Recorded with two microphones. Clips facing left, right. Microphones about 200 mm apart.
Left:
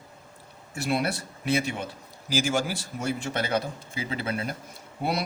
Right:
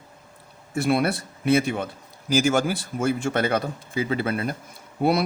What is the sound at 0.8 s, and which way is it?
Speech, 55° right (ahead or behind).